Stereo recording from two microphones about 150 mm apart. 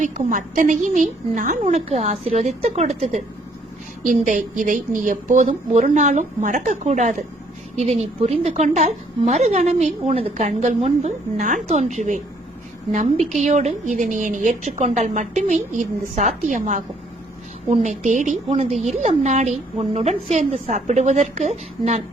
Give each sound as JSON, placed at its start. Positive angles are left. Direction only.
{"t": 0.0, "sound": "a woman's voice", "side_deg": -55}
{"t": 4.0, "sound": "a woman's voice", "side_deg": -60}